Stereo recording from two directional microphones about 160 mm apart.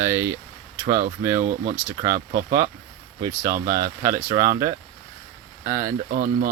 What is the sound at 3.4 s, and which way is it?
Speech, 60° right (ahead or behind).